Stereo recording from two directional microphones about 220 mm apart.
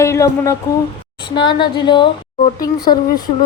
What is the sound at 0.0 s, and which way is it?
Speech, 15° left (ahead or behind).